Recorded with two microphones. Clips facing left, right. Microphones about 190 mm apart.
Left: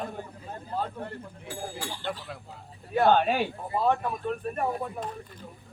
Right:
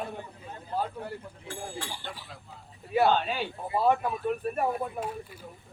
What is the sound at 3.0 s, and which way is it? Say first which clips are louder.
Speech: left 5 dB; 55° left (ahead or behind).